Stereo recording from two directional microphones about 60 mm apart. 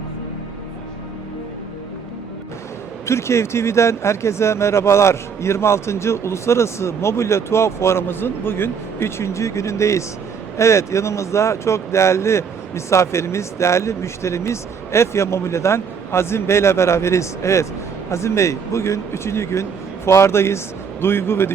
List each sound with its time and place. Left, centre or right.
3.1 s speech: left